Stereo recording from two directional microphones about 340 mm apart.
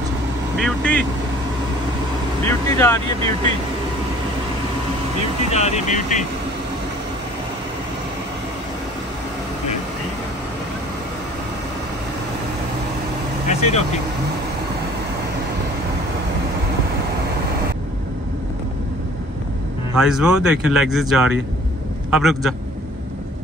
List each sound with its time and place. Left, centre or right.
0.6 s speech: centre
2.4 s speech: centre
5.5 s speech: centre
13.5 s vehicle: centre
20.0 s speech: centre